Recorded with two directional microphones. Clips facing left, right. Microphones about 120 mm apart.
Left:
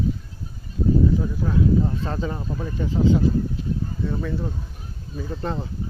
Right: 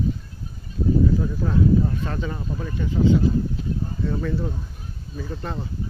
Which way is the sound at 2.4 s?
15° left (ahead or behind).